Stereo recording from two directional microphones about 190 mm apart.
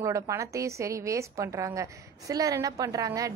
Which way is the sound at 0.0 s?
15° right (ahead or behind).